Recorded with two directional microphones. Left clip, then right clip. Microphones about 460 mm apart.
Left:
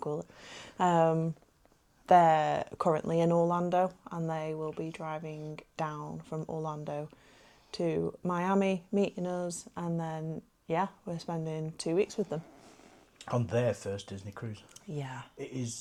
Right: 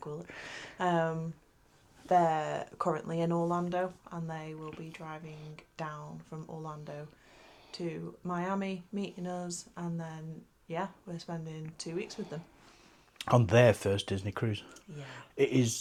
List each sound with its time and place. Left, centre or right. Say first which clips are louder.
0.8 s speech: left 5 dB; left
6.7 s speech: left 6 dB; left
13.1 s speech: right 7 dB; right
14.9 s speech: left 9 dB; left
15.4 s speech: right 14 dB; right